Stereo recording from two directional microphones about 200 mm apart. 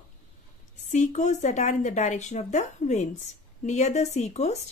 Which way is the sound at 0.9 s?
35° left (ahead or behind).